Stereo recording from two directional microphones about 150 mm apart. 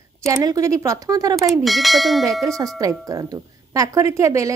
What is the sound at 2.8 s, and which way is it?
Speech, 25° right (ahead or behind).